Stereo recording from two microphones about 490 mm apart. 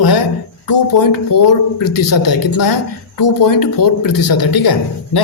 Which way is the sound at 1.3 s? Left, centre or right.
Left.